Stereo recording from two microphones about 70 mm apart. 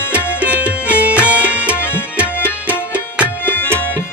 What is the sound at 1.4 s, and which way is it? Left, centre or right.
Tabla, centre.